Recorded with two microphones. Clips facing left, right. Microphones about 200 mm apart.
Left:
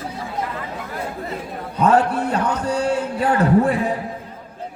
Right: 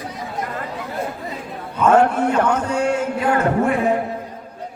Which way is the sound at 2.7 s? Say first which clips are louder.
Right 1 dB; 35° left (ahead or behind).